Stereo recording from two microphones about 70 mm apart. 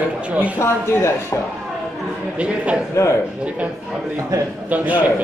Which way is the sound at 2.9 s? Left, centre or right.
Left.